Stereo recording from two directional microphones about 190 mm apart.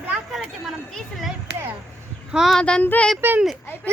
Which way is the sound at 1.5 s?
60° right (ahead or behind).